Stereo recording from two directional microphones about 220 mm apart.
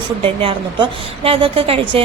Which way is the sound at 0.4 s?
25° right (ahead or behind).